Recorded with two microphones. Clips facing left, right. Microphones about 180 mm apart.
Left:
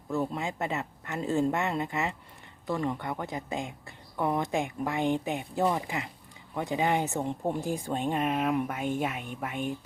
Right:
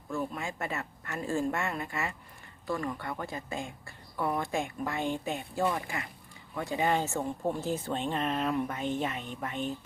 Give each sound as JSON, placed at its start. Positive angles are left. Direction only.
{"t": 0.1, "sound": "speech", "side_deg": 20}